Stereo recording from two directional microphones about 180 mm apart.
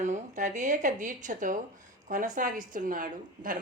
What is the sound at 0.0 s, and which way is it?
A woman's voice, 40° right (ahead or behind).